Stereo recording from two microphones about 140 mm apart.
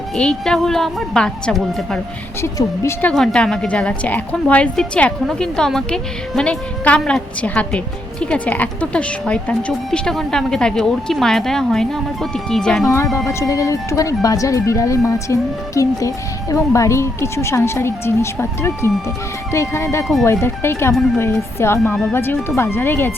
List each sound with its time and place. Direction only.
0.2 s a woman's voice: 5° left (ahead or behind)
2.4 s speech: 20° left (ahead or behind)
3.1 s a woman's voice: 5° left (ahead or behind)
13.1 s a woman's voice: 20° left (ahead or behind)